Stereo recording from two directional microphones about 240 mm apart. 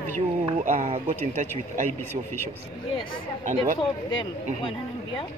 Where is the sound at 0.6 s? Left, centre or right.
Right.